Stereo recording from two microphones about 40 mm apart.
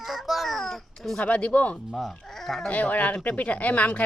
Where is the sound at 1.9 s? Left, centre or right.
Centre.